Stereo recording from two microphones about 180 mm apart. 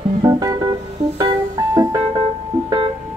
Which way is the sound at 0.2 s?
20° right (ahead or behind).